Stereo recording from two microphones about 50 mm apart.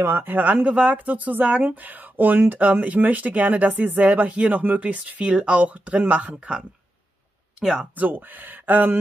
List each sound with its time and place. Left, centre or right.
0.0 s speech: right
0.3 s speech: right
7.6 s speech: centre
7.9 s speech: right